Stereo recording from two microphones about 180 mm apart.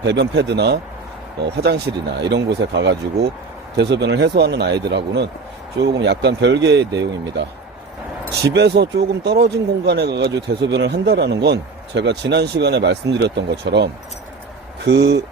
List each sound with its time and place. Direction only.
0.0 s speech: 75° right (ahead or behind)
8.5 s speech: 70° right (ahead or behind)